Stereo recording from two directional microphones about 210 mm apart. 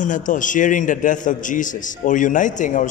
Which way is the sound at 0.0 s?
35° left (ahead or behind).